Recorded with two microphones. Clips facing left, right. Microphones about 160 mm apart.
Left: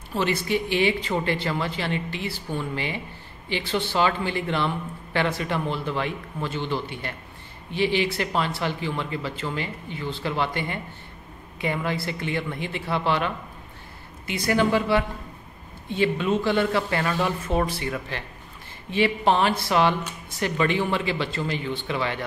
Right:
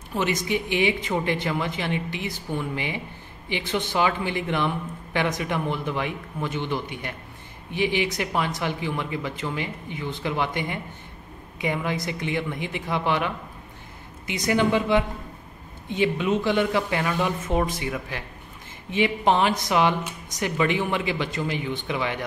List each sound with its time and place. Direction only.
0.1 s a man's voice: 15° right (ahead or behind)